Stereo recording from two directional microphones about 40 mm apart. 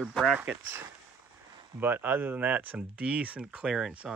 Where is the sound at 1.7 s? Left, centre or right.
Right.